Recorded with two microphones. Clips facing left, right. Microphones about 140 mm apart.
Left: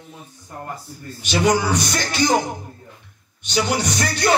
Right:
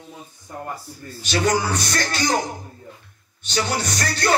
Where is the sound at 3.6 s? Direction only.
15° left (ahead or behind).